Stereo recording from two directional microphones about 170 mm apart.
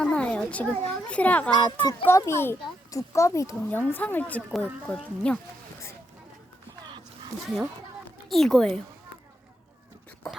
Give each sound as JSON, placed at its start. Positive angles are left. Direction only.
{"t": 0.0, "sound": "a sound", "side_deg": 5}
{"t": 0.9, "sound": "a child's voice", "side_deg": 10}
{"t": 1.8, "sound": "a child's voice", "side_deg": 25}
{"t": 2.0, "sound": "a child's voice", "side_deg": 15}
{"t": 8.3, "sound": "speech", "side_deg": 0}